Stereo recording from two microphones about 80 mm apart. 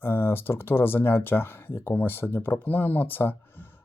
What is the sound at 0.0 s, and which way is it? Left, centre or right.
Speech, left.